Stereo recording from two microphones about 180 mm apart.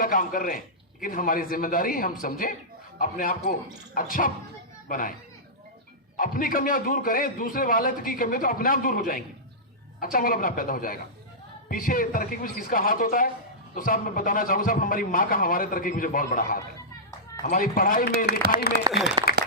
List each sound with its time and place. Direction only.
0.0 s a man's voice: 50° left (ahead or behind)
6.1 s a man's voice: 50° left (ahead or behind)
18.4 s a man's voice: 55° right (ahead or behind)
19.2 s applause: 25° right (ahead or behind)